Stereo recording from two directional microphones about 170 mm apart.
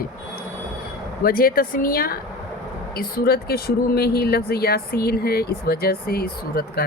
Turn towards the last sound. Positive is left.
turn(degrees=65)  # may be behind; listen again after turning